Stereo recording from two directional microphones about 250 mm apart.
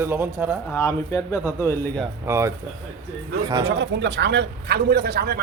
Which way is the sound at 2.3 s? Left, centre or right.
Centre.